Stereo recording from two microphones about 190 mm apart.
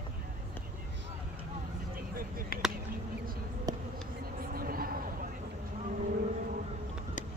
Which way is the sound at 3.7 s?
20° right (ahead or behind).